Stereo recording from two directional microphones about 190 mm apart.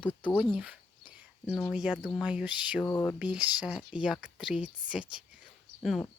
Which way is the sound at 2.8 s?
15° left (ahead or behind).